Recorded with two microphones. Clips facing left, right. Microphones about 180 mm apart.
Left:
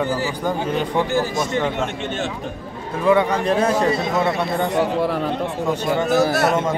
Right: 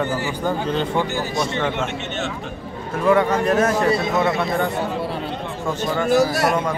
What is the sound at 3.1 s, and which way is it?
A man's voice, 15° left (ahead or behind).